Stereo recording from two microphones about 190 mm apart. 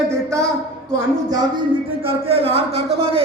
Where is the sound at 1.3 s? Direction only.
20° right (ahead or behind).